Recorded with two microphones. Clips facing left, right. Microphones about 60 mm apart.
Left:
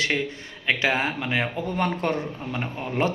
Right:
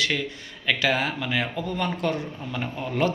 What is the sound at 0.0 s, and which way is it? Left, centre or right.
A man's voice, left.